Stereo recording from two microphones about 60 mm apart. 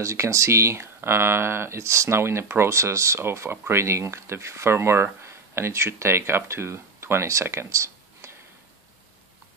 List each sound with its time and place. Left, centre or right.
0.0 s speech: right